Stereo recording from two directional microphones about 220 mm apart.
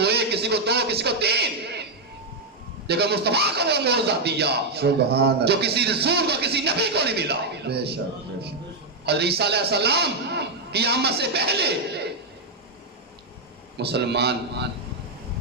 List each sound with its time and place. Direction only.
0.0 s a sound: 50° right (ahead or behind)
2.8 s speech: 50° right (ahead or behind)
9.0 s speech: 45° right (ahead or behind)
13.7 s speech: 50° right (ahead or behind)